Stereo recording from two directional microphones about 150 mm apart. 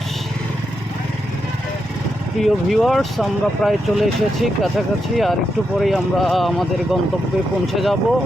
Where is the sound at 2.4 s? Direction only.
Centre (ahead or behind).